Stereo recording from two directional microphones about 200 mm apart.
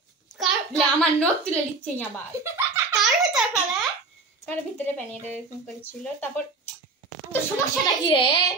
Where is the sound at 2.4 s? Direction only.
15° right (ahead or behind).